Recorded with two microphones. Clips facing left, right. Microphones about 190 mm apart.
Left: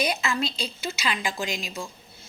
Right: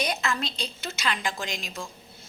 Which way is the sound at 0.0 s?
5° left (ahead or behind).